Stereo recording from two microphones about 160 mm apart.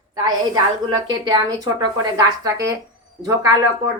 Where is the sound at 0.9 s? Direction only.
25° right (ahead or behind).